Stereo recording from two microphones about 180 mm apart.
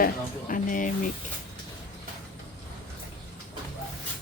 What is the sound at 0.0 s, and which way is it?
Speech, 50° left (ahead or behind).